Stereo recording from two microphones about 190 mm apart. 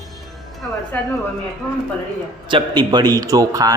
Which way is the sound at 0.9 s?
10° left (ahead or behind).